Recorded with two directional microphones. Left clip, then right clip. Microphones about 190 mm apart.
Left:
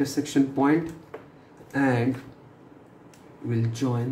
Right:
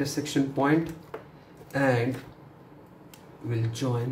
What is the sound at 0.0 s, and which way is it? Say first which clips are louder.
A woman's voice: left 3 dB; 15° left (ahead or behind).